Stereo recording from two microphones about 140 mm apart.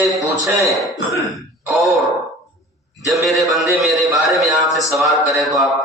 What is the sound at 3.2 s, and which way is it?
A man's voice, centre (ahead or behind).